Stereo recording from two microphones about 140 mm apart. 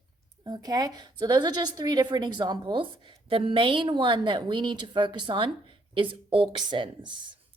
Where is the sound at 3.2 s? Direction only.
40° right (ahead or behind).